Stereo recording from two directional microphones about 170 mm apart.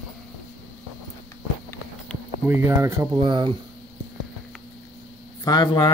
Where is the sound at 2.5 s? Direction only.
15° right (ahead or behind).